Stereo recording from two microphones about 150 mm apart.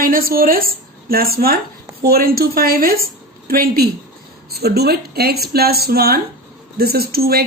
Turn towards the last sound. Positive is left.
turn(degrees=-90)